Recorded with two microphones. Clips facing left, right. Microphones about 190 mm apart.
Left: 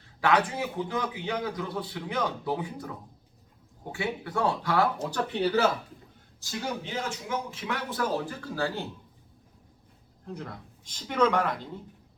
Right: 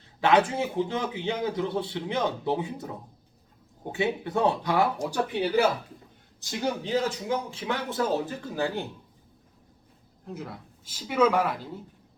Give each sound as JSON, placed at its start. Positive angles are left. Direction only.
{"t": 0.2, "sound": "a man's voice", "side_deg": -25}
{"t": 3.9, "sound": "a man's voice", "side_deg": -20}
{"t": 6.8, "sound": "a man's voice", "side_deg": -35}
{"t": 10.2, "sound": "speech", "side_deg": -5}